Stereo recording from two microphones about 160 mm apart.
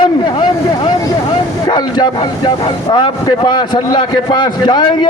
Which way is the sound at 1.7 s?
25° left (ahead or behind).